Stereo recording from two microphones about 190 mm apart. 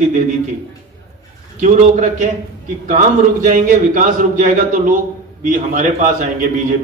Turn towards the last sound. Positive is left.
turn(degrees=-45)  # may be behind; listen again after turning